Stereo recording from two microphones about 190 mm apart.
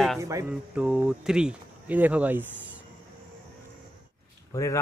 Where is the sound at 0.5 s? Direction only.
5° right (ahead or behind).